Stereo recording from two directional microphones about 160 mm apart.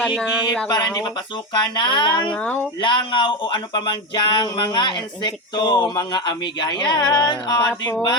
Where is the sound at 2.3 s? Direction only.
10° left (ahead or behind).